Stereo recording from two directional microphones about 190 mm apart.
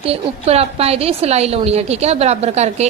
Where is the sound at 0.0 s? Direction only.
30° right (ahead or behind).